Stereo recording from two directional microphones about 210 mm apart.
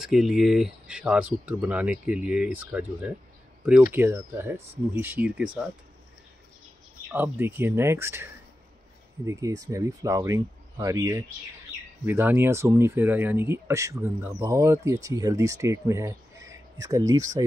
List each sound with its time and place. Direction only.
0.0 s speech: centre (ahead or behind)
7.1 s speech: 10° right (ahead or behind)